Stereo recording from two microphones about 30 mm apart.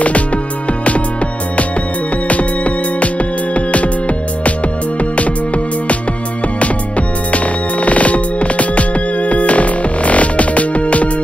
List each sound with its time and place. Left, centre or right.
2.2 s music: left
7.3 s music: left